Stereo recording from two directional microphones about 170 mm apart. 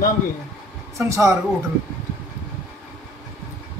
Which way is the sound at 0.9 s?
15° right (ahead or behind).